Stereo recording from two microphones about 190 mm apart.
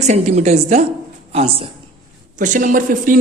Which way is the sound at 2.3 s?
45° right (ahead or behind).